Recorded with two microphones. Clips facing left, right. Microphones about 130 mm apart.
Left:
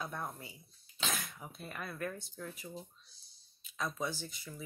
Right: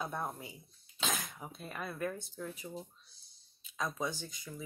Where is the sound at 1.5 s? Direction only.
Centre (ahead or behind).